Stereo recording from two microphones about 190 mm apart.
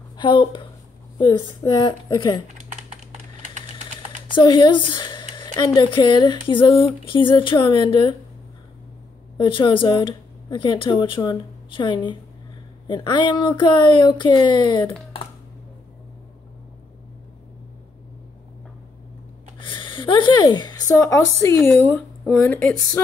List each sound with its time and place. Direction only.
0.2 s speech: 25° left (ahead or behind)
2.4 s typing: 40° right (ahead or behind)
4.4 s speech: 25° left (ahead or behind)
9.4 s speech: 25° left (ahead or behind)
19.6 s a sound: 25° left (ahead or behind)
22.2 s speech: 5° left (ahead or behind)